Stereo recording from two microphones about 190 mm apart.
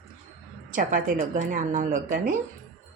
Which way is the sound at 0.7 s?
45° right (ahead or behind).